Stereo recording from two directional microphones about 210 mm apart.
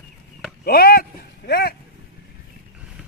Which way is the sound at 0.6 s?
45° left (ahead or behind).